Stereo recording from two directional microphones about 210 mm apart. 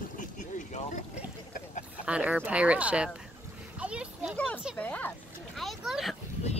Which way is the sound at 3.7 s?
5° right (ahead or behind).